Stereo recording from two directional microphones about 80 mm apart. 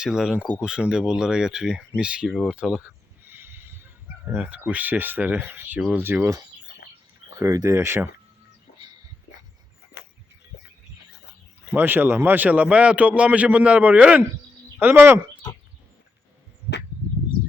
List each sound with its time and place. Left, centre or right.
0.0 s a man's voice: centre
3.2 s a sound: right
4.4 s speech: centre
7.3 s speech: right
11.7 s a man's voice: right